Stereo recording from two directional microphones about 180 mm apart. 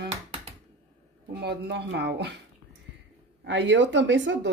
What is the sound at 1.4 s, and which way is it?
Speech, 70° right (ahead or behind).